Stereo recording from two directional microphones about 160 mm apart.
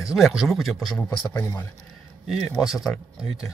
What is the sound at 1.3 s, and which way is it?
Speech, 15° left (ahead or behind).